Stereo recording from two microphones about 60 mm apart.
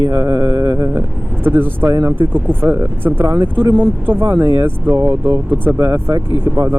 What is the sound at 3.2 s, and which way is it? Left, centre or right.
Speech, right.